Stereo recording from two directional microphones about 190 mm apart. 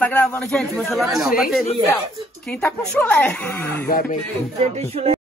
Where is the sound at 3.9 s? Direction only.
45° left (ahead or behind).